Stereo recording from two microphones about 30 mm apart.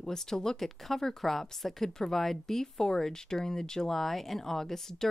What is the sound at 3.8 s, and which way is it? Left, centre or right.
Speech, centre.